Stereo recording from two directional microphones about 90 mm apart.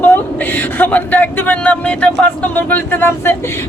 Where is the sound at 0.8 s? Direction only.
20° left (ahead or behind).